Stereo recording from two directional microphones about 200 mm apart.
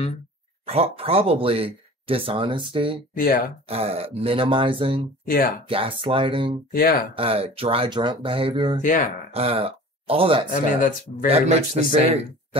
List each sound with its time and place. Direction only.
0.7 s speech: 30° right (ahead or behind)
3.2 s speech: 45° left (ahead or behind)
3.6 s speech: 30° right (ahead or behind)
5.2 s speech: 45° left (ahead or behind)
5.7 s speech: 25° right (ahead or behind)
6.7 s speech: 45° left (ahead or behind)
7.2 s speech: 30° right (ahead or behind)
8.8 s speech: 40° left (ahead or behind)
9.3 s speech: 30° right (ahead or behind)
10.5 s speech: 40° left (ahead or behind)
11.2 s a man's voice: 30° right (ahead or behind)